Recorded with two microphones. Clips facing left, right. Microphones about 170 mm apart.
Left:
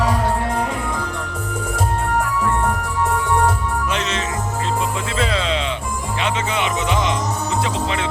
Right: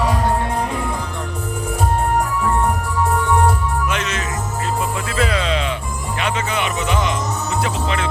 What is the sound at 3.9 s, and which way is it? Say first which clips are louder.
Music: left 1 dB; 30° left (ahead or behind).